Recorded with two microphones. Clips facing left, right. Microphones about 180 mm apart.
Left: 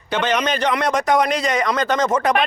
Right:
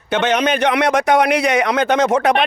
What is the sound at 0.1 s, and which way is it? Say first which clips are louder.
A man's voice: right 4 dB; 65° right (ahead or behind).